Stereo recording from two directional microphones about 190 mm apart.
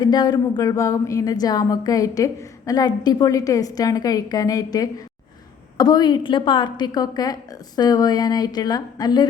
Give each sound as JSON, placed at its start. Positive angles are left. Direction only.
{"t": 0.0, "sound": "a woman's voice", "side_deg": 20}